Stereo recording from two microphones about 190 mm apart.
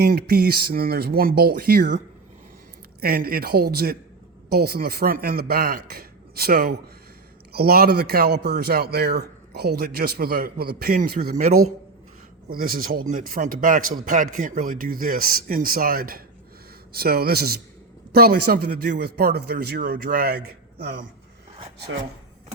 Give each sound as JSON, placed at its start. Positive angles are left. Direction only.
{"t": 0.0, "sound": "a man's voice", "side_deg": -55}
{"t": 3.0, "sound": "a man's voice", "side_deg": -55}
{"t": 12.5, "sound": "a man's voice", "side_deg": -50}